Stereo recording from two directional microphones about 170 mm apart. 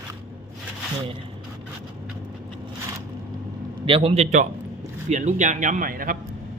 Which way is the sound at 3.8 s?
35° right (ahead or behind).